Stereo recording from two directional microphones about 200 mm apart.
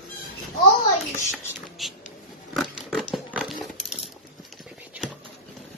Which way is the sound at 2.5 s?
Centre (ahead or behind).